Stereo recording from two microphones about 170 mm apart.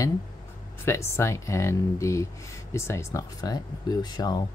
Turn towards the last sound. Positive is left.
turn(degrees=25)  # may be behind; listen again after turning